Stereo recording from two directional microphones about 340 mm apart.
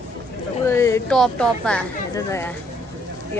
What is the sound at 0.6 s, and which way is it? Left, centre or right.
Speech, centre.